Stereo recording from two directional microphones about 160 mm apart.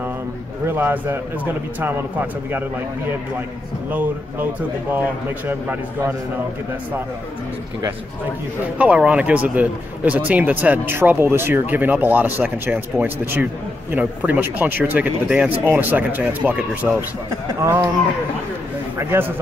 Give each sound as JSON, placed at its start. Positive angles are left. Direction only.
{"t": 0.7, "sound": "speech", "side_deg": -15}
{"t": 3.9, "sound": "speech", "side_deg": -10}
{"t": 5.5, "sound": "speech", "side_deg": -15}
{"t": 8.7, "sound": "speech", "side_deg": -5}
{"t": 17.5, "sound": "speech", "side_deg": -20}
{"t": 18.9, "sound": "speech", "side_deg": -15}